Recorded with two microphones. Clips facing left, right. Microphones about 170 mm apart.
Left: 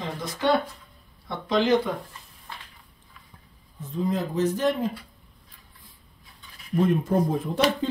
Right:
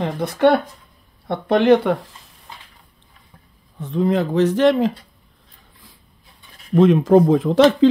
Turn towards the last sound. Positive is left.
turn(degrees=-90)